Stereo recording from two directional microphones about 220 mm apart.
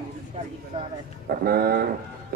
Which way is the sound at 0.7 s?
25° right (ahead or behind).